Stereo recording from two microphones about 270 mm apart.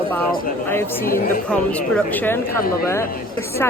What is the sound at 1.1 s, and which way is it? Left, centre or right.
Speech, left.